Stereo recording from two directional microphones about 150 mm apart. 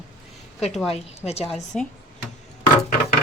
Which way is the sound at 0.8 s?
45° left (ahead or behind).